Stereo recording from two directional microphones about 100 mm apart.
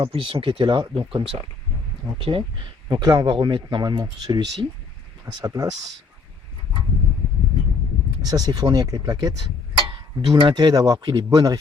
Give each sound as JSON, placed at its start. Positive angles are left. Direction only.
{"t": 0.0, "sound": "speech", "side_deg": -65}
{"t": 2.9, "sound": "speech", "side_deg": -40}
{"t": 8.2, "sound": "speech", "side_deg": -40}
{"t": 10.2, "sound": "speech", "side_deg": -55}